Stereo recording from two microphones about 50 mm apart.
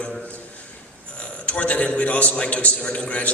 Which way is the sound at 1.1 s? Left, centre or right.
Left.